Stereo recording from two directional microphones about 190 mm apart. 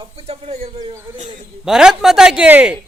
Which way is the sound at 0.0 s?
30° right (ahead or behind).